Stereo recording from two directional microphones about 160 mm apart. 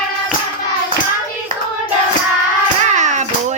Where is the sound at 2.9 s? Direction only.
50° right (ahead or behind).